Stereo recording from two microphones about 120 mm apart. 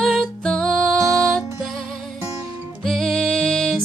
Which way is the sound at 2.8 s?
Centre (ahead or behind).